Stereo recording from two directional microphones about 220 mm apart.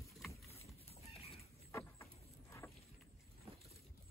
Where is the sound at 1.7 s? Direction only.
10° left (ahead or behind).